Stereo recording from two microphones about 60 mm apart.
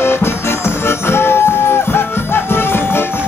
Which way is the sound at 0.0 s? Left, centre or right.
Left.